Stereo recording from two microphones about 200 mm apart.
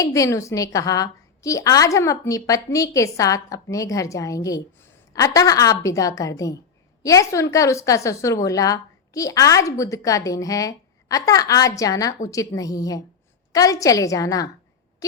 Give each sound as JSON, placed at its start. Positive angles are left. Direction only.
{"t": 0.0, "sound": "a woman's voice", "side_deg": 15}